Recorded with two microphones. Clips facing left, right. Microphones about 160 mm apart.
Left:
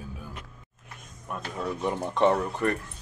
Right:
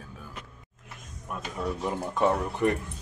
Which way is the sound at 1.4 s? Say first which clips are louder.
Left 1 dB; 5° right (ahead or behind).